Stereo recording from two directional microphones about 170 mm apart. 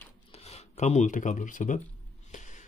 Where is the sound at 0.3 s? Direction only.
35° left (ahead or behind).